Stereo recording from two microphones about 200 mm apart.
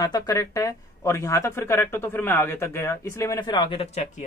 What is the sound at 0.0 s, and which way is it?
Speech, 20° left (ahead or behind).